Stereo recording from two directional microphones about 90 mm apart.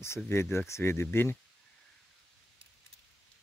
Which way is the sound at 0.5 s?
30° left (ahead or behind).